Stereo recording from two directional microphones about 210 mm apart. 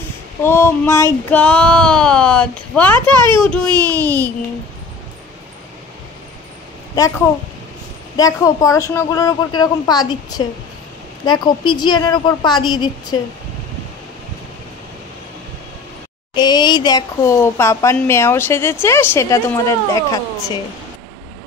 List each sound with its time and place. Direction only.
0.4 s speech: 10° left (ahead or behind)
3.2 s a child's voice: 20° right (ahead or behind)
3.4 s speech: 5° left (ahead or behind)
3.7 s speech: 15° right (ahead or behind)
8.2 s a woman's voice: 15° left (ahead or behind)
16.3 s speech: 20° left (ahead or behind)